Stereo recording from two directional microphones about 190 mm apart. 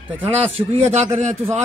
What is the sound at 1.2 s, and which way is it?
Speech, 35° right (ahead or behind).